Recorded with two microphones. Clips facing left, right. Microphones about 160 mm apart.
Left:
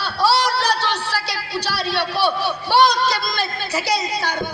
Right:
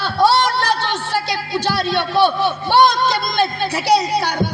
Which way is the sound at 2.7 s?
50° right (ahead or behind).